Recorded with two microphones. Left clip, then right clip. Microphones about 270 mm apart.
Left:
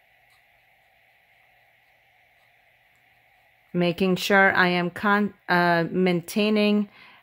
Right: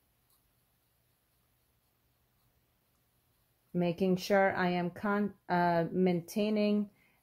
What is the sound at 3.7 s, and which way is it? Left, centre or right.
Speech, centre.